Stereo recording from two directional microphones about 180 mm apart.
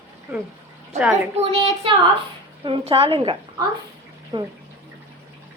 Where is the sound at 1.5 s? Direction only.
30° right (ahead or behind).